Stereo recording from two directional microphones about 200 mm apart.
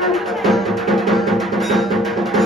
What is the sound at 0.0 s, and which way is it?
Music, centre (ahead or behind).